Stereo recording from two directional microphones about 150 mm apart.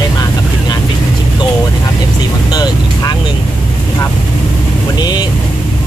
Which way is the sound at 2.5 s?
25° left (ahead or behind).